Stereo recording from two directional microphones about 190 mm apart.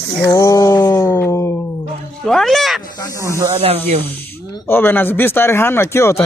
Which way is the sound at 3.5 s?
30° right (ahead or behind).